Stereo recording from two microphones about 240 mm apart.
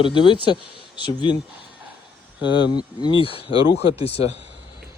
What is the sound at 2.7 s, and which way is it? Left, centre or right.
Speech, centre.